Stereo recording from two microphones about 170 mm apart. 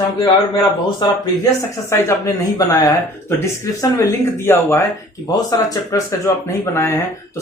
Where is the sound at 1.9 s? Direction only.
20° left (ahead or behind).